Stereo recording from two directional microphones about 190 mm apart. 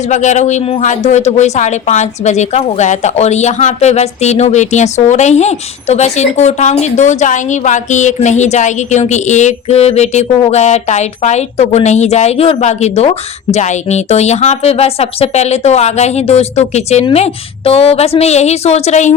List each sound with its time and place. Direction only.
0.1 s a woman's voice: 40° left (ahead or behind)